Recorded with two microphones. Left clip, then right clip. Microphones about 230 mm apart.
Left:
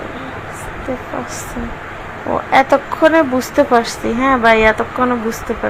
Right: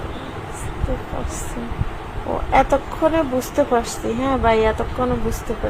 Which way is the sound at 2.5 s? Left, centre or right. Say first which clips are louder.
Left 5 dB; centre.